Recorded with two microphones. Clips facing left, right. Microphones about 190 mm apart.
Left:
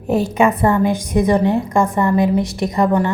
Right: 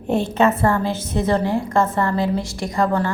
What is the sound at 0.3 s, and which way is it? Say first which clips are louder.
A woman's voice: left 2 dB; 15° left (ahead or behind).